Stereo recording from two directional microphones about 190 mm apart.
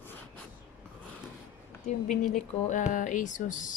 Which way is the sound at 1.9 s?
40° left (ahead or behind).